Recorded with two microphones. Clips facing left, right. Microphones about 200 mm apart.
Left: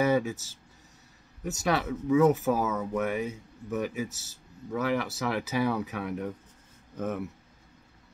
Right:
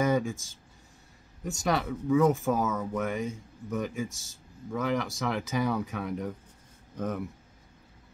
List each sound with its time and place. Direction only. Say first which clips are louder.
0.0 s speech: left 1 dB; 5° left (ahead or behind)